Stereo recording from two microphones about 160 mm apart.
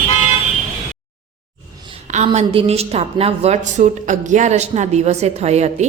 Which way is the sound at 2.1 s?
45° right (ahead or behind).